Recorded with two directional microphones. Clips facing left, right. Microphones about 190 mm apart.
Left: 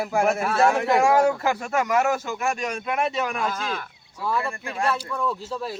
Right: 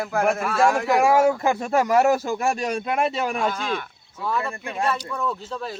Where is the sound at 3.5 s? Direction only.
5° left (ahead or behind).